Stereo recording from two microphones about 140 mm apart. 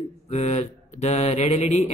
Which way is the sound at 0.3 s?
50° left (ahead or behind).